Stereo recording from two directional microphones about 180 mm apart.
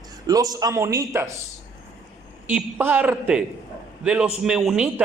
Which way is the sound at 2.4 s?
10° right (ahead or behind).